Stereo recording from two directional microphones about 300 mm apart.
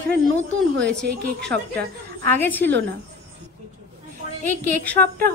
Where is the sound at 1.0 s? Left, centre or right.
Right.